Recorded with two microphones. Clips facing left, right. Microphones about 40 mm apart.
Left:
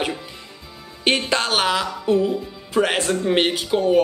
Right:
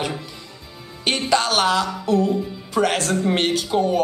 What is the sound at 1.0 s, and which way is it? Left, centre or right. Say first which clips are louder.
Speech: even; centre.